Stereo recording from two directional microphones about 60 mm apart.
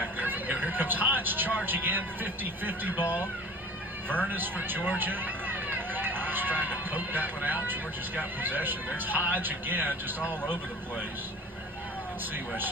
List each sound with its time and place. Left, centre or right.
0.2 s vehicle: right
1.6 s speech: right
4.3 s speech: right
10.4 s speech: centre